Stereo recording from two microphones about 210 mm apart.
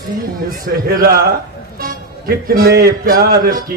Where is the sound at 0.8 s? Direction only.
45° right (ahead or behind).